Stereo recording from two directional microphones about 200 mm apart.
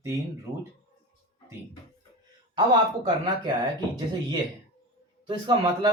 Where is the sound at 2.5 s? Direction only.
25° right (ahead or behind).